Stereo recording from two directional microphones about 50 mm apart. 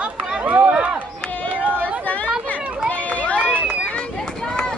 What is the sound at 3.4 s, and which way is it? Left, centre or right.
Run, right.